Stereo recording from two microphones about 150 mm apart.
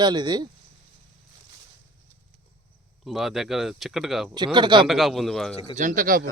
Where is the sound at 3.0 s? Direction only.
Centre (ahead or behind).